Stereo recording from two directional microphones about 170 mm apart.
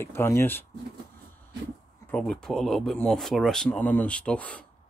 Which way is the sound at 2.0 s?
5° left (ahead or behind).